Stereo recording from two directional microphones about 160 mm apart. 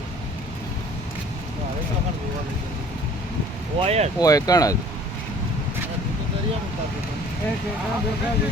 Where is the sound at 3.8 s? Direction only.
40° right (ahead or behind).